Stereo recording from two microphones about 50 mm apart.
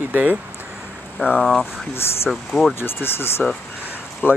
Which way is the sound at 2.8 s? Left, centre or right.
Left.